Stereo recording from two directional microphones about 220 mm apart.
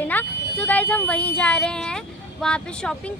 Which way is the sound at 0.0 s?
10° left (ahead or behind).